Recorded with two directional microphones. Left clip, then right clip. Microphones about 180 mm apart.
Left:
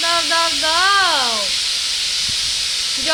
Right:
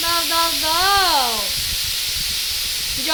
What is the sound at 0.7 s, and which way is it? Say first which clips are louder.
Speech: left 2 dB; 15° right (ahead or behind).